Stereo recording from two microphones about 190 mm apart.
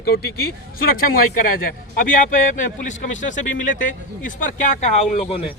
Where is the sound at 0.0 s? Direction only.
55° left (ahead or behind).